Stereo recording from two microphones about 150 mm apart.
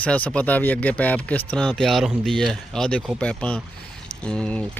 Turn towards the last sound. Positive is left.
turn(degrees=10)  # may be behind; listen again after turning